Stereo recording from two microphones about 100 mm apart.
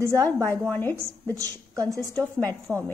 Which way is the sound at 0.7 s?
20° left (ahead or behind).